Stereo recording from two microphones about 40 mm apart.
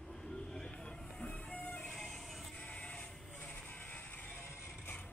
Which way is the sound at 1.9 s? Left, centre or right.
Centre.